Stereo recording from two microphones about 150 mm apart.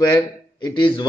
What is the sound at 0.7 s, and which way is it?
Speech, 35° left (ahead or behind).